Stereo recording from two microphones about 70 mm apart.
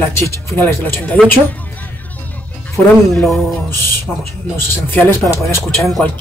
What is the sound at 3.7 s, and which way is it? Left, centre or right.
Speech, left.